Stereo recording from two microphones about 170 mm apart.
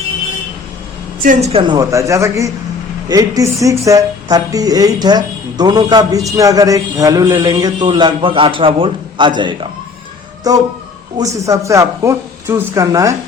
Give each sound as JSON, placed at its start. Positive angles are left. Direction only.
{"t": 1.2, "sound": "a woman's voice", "side_deg": -50}
{"t": 1.5, "sound": "speech", "side_deg": -25}